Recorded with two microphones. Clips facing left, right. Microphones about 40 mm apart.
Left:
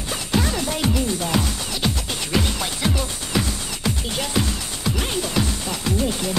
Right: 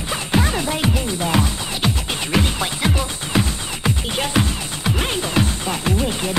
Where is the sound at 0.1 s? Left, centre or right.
Right.